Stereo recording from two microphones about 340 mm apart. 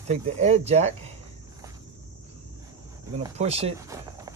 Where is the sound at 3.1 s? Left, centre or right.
Centre.